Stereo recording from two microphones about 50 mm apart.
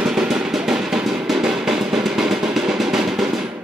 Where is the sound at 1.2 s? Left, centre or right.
Centre.